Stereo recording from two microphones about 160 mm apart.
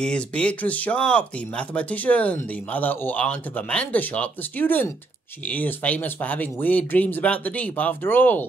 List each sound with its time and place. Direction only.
0.0 s speech: 5° left (ahead or behind)